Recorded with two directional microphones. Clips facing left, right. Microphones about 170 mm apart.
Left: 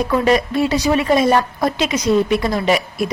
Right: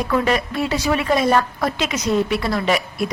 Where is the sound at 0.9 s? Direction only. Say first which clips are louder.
Left 2 dB; 20° left (ahead or behind).